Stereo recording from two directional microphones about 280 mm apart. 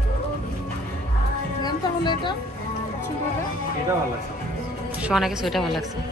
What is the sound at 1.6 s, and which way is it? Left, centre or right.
Speech, centre.